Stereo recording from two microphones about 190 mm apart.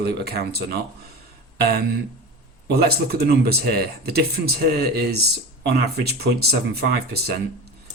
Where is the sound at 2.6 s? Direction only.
55° right (ahead or behind).